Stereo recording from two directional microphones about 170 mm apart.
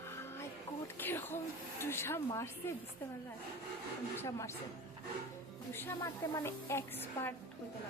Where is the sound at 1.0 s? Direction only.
10° left (ahead or behind).